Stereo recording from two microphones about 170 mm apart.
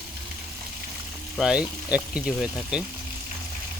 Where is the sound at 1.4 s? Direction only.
5° right (ahead or behind).